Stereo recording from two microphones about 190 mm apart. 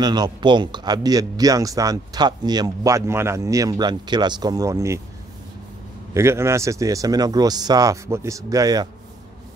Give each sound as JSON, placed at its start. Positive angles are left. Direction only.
{"t": 0.0, "sound": "speech", "side_deg": -20}
{"t": 6.1, "sound": "speech", "side_deg": -15}